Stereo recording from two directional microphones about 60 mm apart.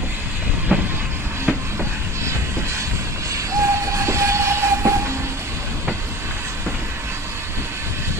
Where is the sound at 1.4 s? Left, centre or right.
Right.